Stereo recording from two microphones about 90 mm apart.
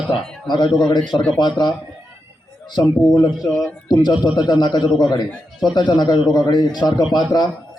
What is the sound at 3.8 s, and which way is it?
A man's voice, 50° left (ahead or behind).